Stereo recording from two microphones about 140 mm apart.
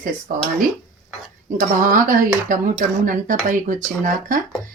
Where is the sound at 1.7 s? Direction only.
75° right (ahead or behind).